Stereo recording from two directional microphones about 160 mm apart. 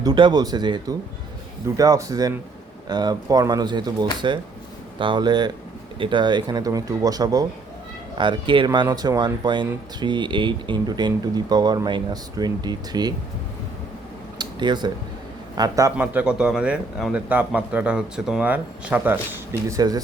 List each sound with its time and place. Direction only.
0.0 s speech: 25° right (ahead or behind)
14.3 s a sound: 25° right (ahead or behind)
15.5 s speech: 20° right (ahead or behind)
16.0 s speech: 10° right (ahead or behind)
19.6 s speech: 20° right (ahead or behind)